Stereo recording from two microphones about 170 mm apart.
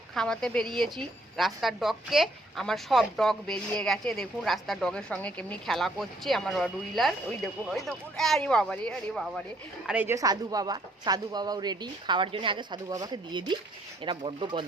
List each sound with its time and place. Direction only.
0.1 s a woman's voice: 5° left (ahead or behind)
9.8 s speech: 10° right (ahead or behind); by 14.6 s 30° right (ahead or behind)